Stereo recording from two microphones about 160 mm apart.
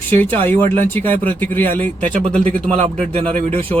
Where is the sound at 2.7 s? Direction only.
40° right (ahead or behind).